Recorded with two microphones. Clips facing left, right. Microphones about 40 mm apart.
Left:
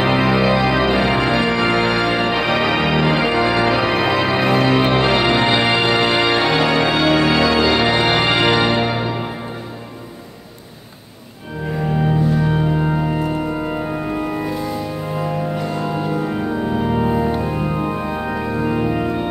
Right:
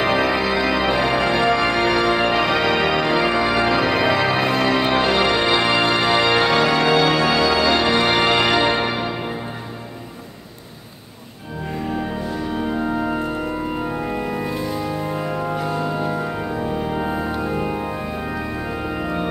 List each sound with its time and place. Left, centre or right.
0.0 s music: centre
8.6 s music: centre
12.4 s organ: centre
13.0 s music: centre
13.7 s organ: centre
15.5 s music: centre
16.5 s music: centre
17.0 s music: centre
18.1 s organ: centre